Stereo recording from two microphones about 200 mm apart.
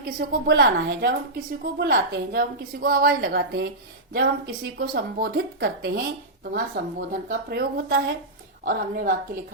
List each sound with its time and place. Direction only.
0.0 s a woman's voice: 50° right (ahead or behind)
8.6 s a woman's voice: 45° right (ahead or behind)